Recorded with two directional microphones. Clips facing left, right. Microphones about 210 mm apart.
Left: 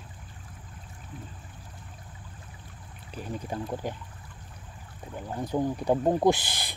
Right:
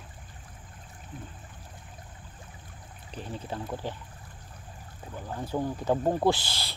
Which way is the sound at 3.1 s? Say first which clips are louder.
Left 2 dB; 10° left (ahead or behind).